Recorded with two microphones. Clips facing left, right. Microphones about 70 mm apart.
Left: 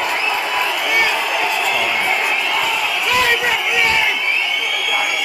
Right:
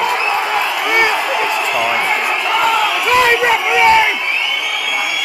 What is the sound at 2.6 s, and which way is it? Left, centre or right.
Crowd, right.